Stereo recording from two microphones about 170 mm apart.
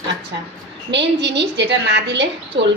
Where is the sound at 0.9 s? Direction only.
90° right.